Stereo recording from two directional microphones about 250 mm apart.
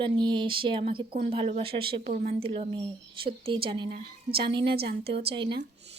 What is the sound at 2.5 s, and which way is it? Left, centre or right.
A woman's voice, right.